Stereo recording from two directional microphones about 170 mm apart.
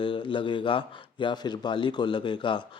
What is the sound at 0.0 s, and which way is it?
Speech, 30° left (ahead or behind).